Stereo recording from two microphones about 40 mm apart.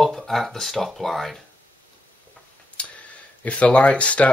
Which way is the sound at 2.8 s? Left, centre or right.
Left.